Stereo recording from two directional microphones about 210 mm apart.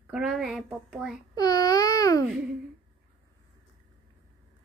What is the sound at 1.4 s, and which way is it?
Speech, 20° left (ahead or behind).